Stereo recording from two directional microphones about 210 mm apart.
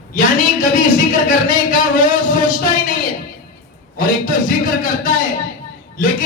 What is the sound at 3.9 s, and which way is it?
A man's voice, 40° left (ahead or behind).